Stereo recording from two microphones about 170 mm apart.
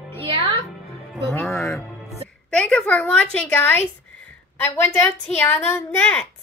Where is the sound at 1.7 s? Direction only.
Centre (ahead or behind).